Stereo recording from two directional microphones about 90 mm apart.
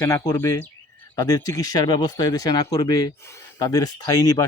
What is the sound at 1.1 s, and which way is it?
Speech, 45° left (ahead or behind).